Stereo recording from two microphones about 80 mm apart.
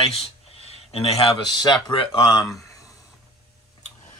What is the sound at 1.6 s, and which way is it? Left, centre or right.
Speech, left.